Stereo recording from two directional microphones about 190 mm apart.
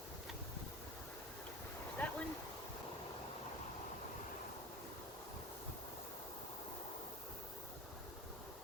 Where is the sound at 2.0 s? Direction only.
5° left (ahead or behind).